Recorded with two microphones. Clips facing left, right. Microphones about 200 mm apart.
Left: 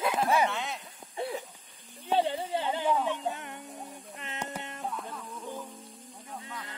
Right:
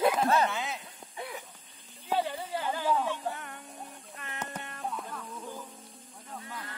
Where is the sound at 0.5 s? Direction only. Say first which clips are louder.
Even; centre (ahead or behind).